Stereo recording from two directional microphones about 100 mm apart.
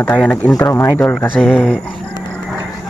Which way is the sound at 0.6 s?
30° left (ahead or behind).